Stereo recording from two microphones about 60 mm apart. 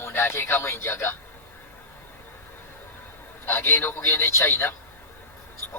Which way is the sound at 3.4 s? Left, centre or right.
Left.